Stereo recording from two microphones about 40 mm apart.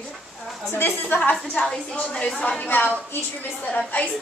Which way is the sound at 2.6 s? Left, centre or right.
Left.